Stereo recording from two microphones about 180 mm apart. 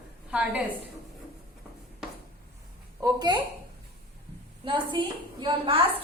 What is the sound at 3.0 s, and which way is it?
Speech, 20° right (ahead or behind).